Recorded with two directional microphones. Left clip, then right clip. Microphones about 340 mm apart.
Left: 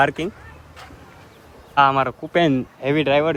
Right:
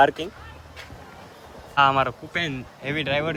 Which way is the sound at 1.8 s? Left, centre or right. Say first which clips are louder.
Left 3 dB; centre.